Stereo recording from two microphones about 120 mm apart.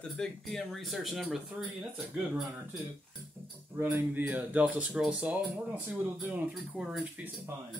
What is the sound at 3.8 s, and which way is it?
Speech, 15° right (ahead or behind).